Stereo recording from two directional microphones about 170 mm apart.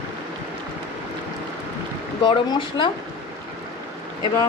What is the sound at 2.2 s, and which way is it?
Speech, 30° left (ahead or behind).